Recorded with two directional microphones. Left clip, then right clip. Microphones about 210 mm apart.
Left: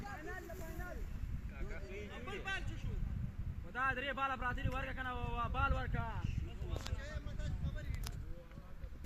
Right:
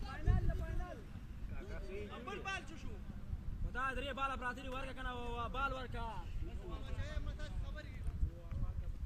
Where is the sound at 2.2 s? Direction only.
20° left (ahead or behind).